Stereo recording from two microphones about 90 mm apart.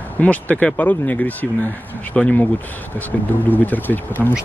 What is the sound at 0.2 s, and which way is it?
Speech, 15° left (ahead or behind).